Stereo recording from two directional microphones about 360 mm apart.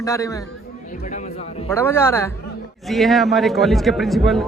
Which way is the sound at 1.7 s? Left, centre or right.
Centre.